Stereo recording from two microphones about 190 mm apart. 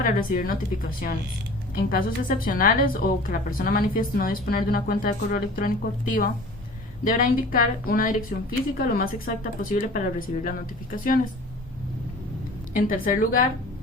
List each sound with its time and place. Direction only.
0.0 s a woman's voice: 50° left (ahead or behind)
7.0 s a woman's voice: 45° left (ahead or behind)
12.7 s a woman's voice: 45° left (ahead or behind)